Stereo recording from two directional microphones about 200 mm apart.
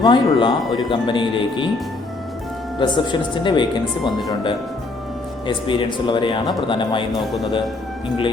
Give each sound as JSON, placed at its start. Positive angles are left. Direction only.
{"t": 0.0, "sound": "speech", "side_deg": 20}
{"t": 2.7, "sound": "speech", "side_deg": 20}
{"t": 5.5, "sound": "speech", "side_deg": 25}
{"t": 7.1, "sound": "speech", "side_deg": 0}